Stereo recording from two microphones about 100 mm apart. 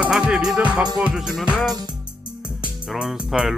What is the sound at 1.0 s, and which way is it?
Speech, 10° right (ahead or behind).